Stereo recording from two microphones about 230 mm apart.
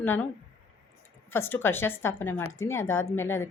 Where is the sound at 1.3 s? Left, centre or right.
Centre.